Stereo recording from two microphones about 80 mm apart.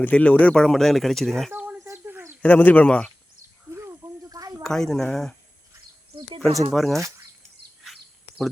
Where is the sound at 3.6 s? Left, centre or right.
Right.